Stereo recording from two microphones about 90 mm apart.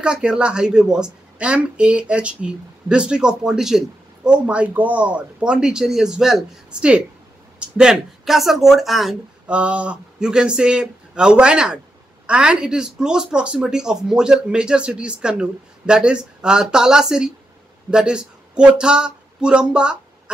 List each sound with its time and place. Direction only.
0.0 s speech: 10° right (ahead or behind)
9.5 s speech: 15° right (ahead or behind)